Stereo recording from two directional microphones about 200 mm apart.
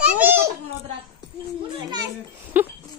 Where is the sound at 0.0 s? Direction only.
10° right (ahead or behind).